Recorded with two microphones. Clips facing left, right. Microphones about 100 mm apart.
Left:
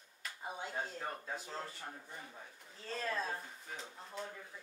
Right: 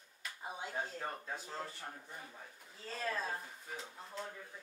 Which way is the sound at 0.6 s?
5° right (ahead or behind).